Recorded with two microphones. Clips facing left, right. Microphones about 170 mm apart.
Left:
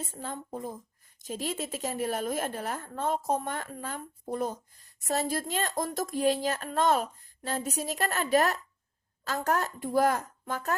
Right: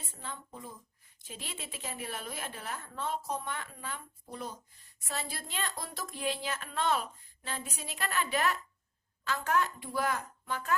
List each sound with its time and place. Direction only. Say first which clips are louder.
0.0 s a woman's voice: left 7 dB; 45° left (ahead or behind)